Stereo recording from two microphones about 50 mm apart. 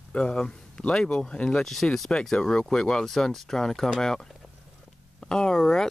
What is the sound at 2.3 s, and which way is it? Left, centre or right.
Speech, centre.